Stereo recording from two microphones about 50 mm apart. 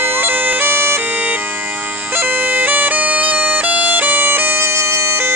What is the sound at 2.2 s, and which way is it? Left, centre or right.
Bagpipes, right.